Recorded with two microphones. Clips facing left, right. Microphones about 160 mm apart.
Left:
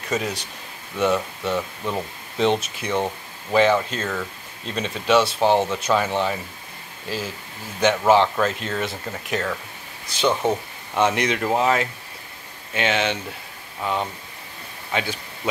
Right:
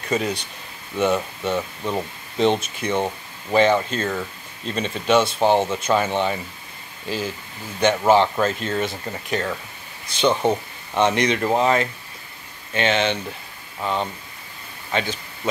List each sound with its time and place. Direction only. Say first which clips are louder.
0.1 s speech: right 2 dB; centre (ahead or behind)
14.9 s speech: right 1 dB; 5° left (ahead or behind)